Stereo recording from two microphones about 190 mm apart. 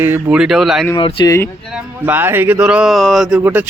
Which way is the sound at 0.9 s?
20° left (ahead or behind).